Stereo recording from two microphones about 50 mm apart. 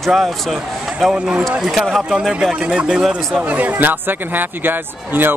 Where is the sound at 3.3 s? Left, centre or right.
Right.